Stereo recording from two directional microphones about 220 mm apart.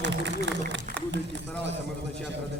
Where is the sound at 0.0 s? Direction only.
55° right (ahead or behind).